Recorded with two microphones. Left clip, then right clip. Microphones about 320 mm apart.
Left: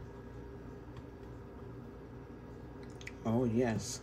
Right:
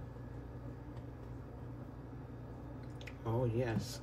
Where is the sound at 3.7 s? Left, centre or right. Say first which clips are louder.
Left 2 dB; centre.